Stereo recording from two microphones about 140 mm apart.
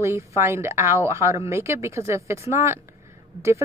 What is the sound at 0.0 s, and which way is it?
Speech, 20° right (ahead or behind).